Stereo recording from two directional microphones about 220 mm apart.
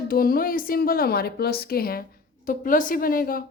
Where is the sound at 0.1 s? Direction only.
40° left (ahead or behind).